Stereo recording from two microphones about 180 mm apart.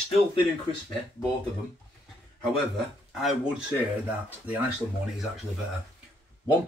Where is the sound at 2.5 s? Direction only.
Centre (ahead or behind).